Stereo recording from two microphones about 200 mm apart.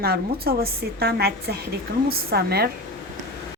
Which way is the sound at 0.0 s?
50° right (ahead or behind).